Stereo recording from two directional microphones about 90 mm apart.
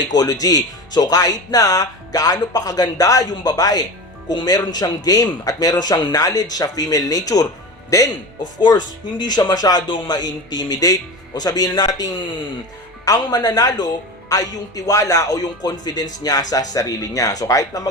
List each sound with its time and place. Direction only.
0.1 s speech: 45° left (ahead or behind)
8.6 s speech: 50° left (ahead or behind)